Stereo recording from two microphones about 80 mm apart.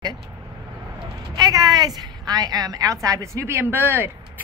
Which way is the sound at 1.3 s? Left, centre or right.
Right.